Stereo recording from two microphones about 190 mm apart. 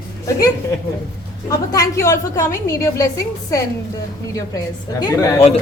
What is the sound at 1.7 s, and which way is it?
A woman's voice, 15° left (ahead or behind).